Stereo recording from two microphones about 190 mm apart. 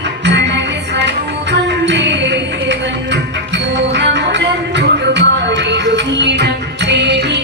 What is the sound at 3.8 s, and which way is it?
Music, 65° right (ahead or behind).